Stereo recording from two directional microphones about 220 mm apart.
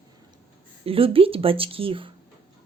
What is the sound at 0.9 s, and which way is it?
Speech, 25° right (ahead or behind).